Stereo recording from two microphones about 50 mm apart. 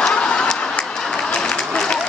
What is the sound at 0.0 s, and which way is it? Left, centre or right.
Applause, centre.